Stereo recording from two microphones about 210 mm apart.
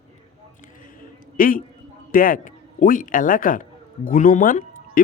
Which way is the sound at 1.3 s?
40° left (ahead or behind).